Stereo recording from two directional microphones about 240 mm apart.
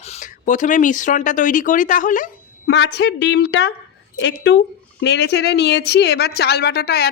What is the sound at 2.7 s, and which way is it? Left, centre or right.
A woman's voice, left.